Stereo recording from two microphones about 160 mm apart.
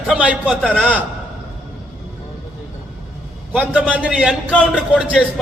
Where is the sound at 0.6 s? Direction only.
5° left (ahead or behind).